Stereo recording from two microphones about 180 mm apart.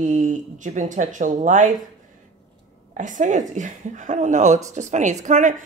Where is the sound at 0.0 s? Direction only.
45° right (ahead or behind).